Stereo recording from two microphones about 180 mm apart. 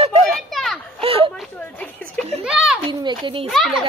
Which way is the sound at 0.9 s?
30° right (ahead or behind).